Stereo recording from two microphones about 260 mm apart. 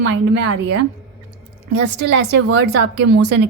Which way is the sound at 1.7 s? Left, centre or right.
Right.